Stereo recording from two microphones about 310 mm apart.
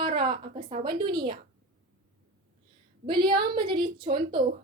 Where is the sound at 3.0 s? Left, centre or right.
Centre.